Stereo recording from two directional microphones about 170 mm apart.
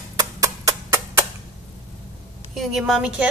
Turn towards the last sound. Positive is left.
turn(degrees=-5)  # may be behind; listen again after turning